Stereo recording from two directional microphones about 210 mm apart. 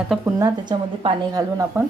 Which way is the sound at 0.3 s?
20° right (ahead or behind).